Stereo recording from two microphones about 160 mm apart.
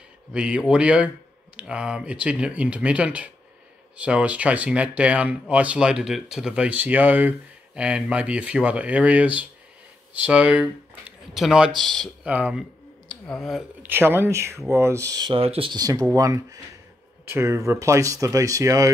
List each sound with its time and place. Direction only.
0.3 s speech: 5° right (ahead or behind)
12.3 s speech: 10° right (ahead or behind)
13.1 s speech: centre (ahead or behind)
13.8 s speech: 15° right (ahead or behind)